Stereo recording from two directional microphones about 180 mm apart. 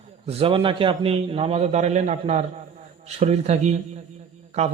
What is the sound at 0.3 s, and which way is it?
Speech, 30° right (ahead or behind).